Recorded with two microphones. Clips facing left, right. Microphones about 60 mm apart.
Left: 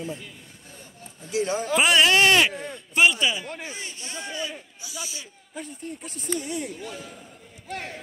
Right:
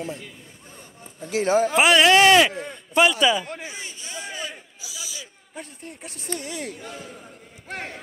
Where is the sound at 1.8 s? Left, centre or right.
Right.